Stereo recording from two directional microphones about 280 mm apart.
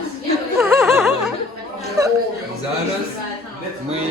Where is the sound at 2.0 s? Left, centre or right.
Centre.